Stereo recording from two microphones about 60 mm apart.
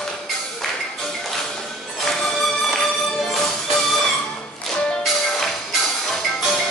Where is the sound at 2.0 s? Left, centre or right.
Centre.